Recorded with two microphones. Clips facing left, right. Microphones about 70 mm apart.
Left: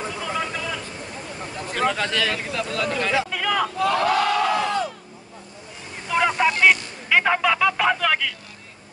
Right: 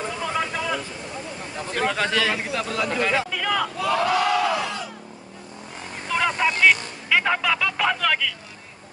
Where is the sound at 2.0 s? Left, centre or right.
Centre.